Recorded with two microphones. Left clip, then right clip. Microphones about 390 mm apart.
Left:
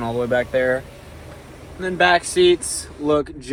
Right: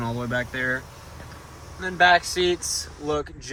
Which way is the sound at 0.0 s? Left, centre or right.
Left.